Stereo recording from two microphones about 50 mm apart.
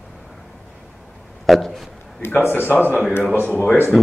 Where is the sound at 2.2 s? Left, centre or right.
Left.